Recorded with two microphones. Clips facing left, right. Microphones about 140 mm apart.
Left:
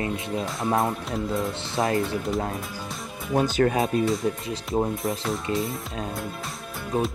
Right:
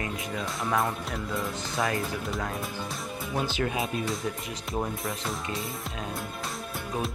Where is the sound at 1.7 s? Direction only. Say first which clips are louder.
Left 5 dB; 30° left (ahead or behind).